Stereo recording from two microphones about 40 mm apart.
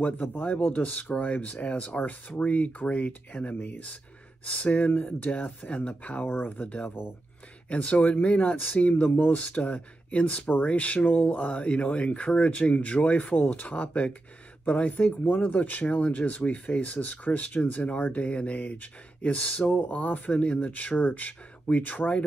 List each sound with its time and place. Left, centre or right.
0.0 s speech: left
3.5 s speech: left
4.5 s speech: left
6.2 s speech: left
9.3 s speech: left
11.6 s speech: left
14.9 s speech: left
17.6 s speech: left